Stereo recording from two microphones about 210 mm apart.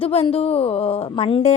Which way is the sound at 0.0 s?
30° left (ahead or behind).